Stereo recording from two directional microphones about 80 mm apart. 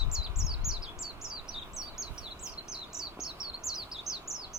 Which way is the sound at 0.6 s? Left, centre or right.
Centre.